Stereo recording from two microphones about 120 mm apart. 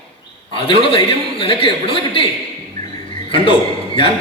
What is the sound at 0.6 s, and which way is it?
A man's voice, 45° left (ahead or behind).